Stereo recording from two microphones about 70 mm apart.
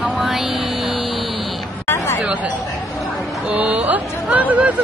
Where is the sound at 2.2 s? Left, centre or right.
Centre.